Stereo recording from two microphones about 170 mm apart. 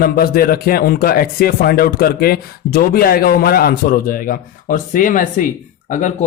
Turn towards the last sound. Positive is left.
turn(degrees=45)  # may be behind; listen again after turning